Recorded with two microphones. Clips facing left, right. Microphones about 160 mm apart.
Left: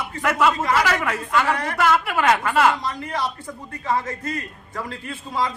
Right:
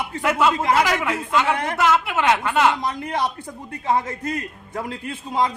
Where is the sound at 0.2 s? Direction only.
25° right (ahead or behind).